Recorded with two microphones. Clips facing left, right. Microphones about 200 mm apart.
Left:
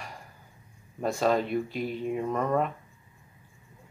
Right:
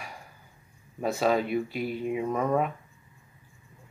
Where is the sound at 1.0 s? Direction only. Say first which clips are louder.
Even; 5° right (ahead or behind).